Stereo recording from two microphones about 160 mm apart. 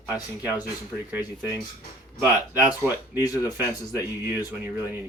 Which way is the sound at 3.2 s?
25° left (ahead or behind).